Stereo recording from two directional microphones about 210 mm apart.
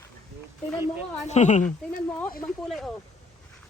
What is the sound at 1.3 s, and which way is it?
Speech, 35° left (ahead or behind).